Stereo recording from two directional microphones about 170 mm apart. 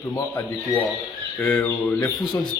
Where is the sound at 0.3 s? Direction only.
10° left (ahead or behind).